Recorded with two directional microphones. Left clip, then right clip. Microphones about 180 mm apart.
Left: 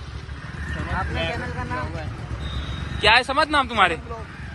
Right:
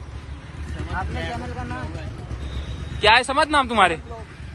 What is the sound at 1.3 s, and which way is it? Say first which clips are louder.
Speech: left 2 dB; 35° right (ahead or behind).